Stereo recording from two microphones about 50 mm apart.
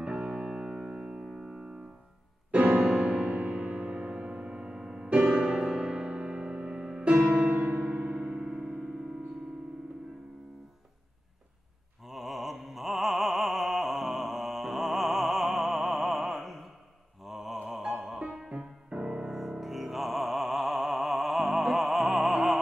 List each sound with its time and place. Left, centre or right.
0.0 s keyboard: right
2.5 s music: right
7.4 s music: right
8.0 s keyboard: right
12.0 s opera: centre
17.2 s mantra: centre
17.9 s music: centre
19.3 s music: centre
22.3 s opera: centre